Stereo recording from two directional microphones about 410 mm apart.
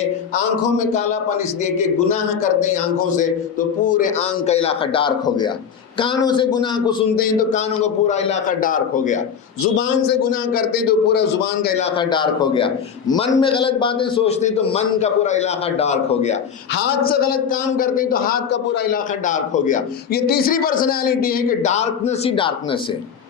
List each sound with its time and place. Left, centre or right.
3.1 s a man's voice: centre
10.5 s a man's voice: left
11.9 s a man's voice: centre